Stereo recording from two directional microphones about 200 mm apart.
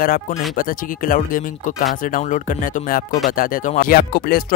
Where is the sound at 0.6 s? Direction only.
45° left (ahead or behind).